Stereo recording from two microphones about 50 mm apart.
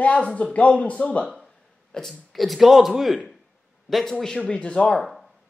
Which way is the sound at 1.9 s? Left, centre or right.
Centre.